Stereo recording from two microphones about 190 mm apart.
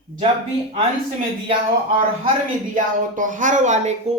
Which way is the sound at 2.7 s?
45° right (ahead or behind).